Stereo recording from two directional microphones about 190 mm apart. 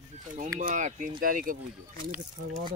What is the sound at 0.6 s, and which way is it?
Speech, 40° right (ahead or behind).